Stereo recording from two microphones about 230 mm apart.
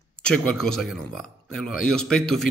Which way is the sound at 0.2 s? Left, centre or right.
Centre.